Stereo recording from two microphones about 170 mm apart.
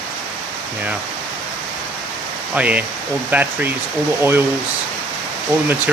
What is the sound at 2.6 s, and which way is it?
Speech, 10° right (ahead or behind).